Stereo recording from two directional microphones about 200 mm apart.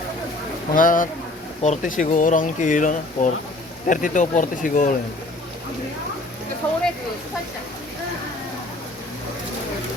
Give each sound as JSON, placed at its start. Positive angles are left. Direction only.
{"t": 0.7, "sound": "speech", "side_deg": 45}
{"t": 6.6, "sound": "speech", "side_deg": 10}